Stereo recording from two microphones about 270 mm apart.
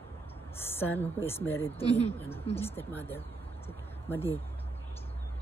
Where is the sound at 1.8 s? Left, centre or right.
Left.